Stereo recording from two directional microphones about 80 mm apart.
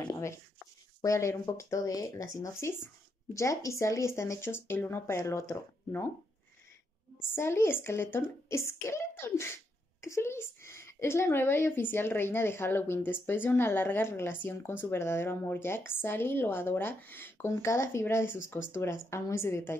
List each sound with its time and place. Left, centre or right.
1.0 s speech: left
7.3 s a woman's voice: left